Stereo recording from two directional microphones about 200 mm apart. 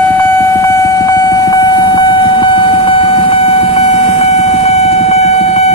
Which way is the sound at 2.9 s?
25° left (ahead or behind).